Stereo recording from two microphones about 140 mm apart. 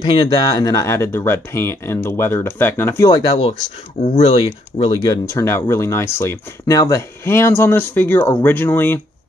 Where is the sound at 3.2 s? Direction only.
45° left (ahead or behind); by 9.0 s 15° left (ahead or behind).